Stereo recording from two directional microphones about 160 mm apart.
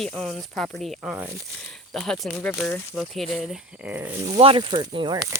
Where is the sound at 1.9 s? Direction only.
Centre (ahead or behind).